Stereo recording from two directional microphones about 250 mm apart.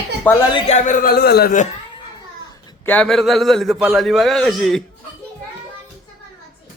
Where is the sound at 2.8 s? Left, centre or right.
Centre.